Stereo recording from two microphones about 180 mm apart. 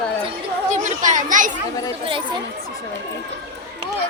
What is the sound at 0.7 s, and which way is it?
Children playing, 45° right (ahead or behind).